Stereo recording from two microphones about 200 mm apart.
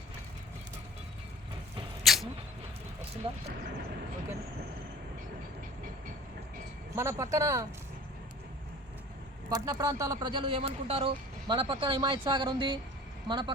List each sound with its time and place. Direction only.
2.0 s a sound: centre (ahead or behind)
3.2 s speech: 30° right (ahead or behind)
6.9 s speech: 15° right (ahead or behind)
9.5 s speech: 20° right (ahead or behind)